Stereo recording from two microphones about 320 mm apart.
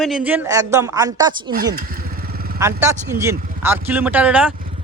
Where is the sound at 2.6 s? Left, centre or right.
Centre.